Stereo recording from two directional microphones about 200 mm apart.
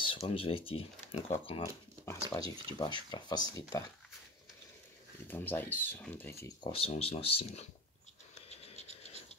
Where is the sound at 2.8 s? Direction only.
20° left (ahead or behind).